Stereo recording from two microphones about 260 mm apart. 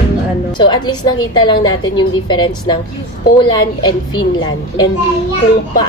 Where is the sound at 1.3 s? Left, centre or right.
Centre.